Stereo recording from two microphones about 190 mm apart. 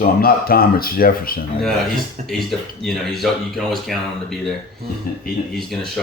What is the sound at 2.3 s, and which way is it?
Speech, centre (ahead or behind).